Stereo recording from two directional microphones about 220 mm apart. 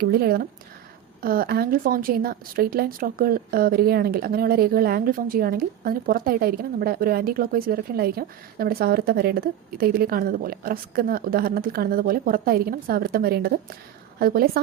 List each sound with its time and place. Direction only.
0.0 s speech: 45° right (ahead or behind)